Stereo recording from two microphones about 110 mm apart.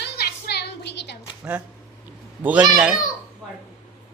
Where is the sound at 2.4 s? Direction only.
15° right (ahead or behind).